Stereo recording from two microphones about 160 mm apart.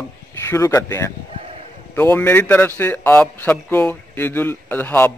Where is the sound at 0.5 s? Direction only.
20° left (ahead or behind).